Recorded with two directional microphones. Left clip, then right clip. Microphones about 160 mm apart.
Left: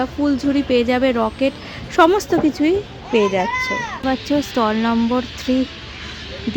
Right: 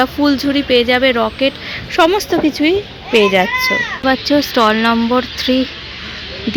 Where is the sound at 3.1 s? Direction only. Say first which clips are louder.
Right 6 dB; 5° left (ahead or behind).